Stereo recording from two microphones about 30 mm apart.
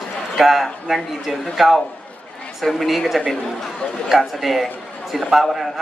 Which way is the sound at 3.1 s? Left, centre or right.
Centre.